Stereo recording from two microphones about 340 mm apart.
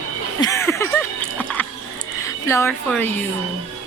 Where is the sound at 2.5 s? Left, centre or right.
Centre.